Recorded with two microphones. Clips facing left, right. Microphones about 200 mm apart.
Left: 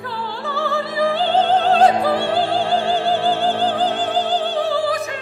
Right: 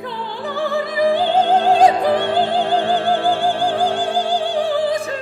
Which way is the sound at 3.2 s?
15° right (ahead or behind).